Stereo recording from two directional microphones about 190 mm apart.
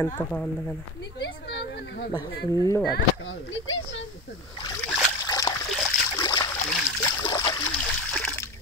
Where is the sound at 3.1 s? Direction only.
85° left.